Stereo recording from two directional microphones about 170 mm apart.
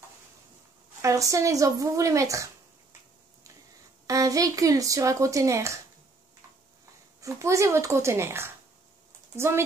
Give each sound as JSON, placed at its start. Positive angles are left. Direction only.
{"t": 1.0, "sound": "speech", "side_deg": -20}
{"t": 4.1, "sound": "speech", "side_deg": -20}
{"t": 7.2, "sound": "speech", "side_deg": -20}